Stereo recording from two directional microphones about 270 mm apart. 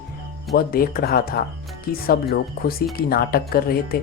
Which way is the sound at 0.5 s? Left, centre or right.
Left.